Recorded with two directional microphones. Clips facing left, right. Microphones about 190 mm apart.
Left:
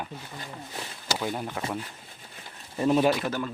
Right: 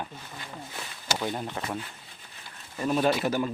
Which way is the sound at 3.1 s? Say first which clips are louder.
Right 1 dB; 5° right (ahead or behind).